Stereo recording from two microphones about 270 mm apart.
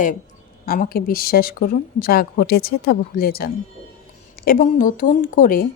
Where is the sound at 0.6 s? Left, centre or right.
Left.